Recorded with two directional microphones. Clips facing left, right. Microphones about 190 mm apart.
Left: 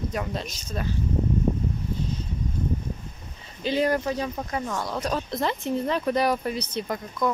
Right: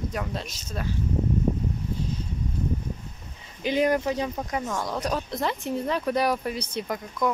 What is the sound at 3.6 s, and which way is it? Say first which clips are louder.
Speech: right 1 dB; 15° right (ahead or behind).